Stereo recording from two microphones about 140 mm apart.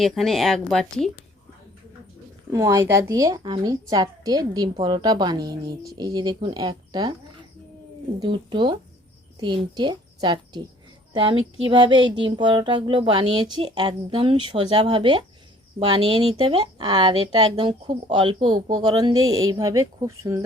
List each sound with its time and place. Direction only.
0.0 s speech: centre (ahead or behind)
2.5 s a woman's voice: 25° right (ahead or behind)
8.2 s a sound: 35° right (ahead or behind)
9.4 s a woman's voice: 35° right (ahead or behind)
11.1 s a sound: 35° right (ahead or behind)
18.7 s a woman's voice: 30° right (ahead or behind)